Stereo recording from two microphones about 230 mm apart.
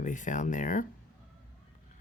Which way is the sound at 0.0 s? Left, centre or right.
Left.